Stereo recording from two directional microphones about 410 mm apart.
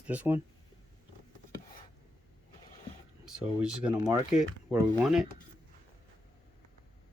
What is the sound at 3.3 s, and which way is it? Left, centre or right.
Speech, centre.